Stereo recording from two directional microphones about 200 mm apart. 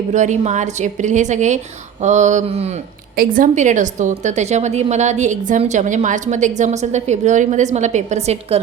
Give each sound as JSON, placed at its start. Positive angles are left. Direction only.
{"t": 0.1, "sound": "a woman's voice", "side_deg": -35}